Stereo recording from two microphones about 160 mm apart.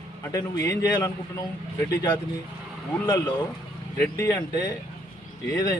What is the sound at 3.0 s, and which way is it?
A man's voice, 25° left (ahead or behind).